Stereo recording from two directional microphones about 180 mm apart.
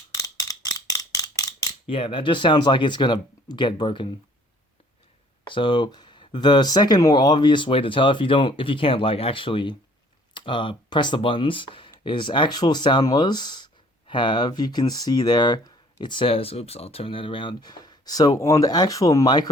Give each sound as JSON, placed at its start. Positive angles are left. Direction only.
{"t": 0.1, "sound": "a sound", "side_deg": 20}
{"t": 1.9, "sound": "speech", "side_deg": 30}
{"t": 5.5, "sound": "speech", "side_deg": 25}